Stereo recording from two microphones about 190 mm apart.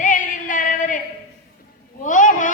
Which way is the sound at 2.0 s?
40° left (ahead or behind).